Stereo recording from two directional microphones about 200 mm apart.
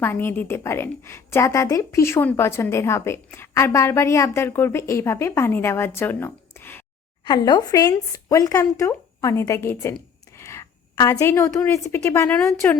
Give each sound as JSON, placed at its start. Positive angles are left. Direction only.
{"t": 0.0, "sound": "a woman's voice", "side_deg": 10}
{"t": 7.3, "sound": "a woman's voice", "side_deg": 20}